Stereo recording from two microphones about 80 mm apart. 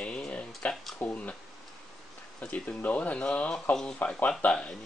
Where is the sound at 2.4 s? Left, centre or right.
Centre.